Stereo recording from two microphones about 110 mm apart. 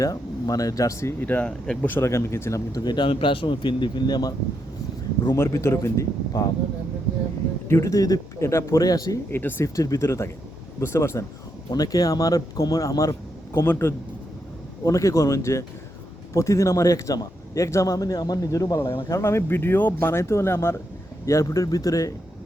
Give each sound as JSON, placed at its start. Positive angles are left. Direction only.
{"t": 0.0, "sound": "a man's voice", "side_deg": 35}
{"t": 1.9, "sound": "a man's voice", "side_deg": 25}
{"t": 7.7, "sound": "a man's voice", "side_deg": 30}
{"t": 9.3, "sound": "a man's voice", "side_deg": 20}
{"t": 9.6, "sound": "a man's voice", "side_deg": 30}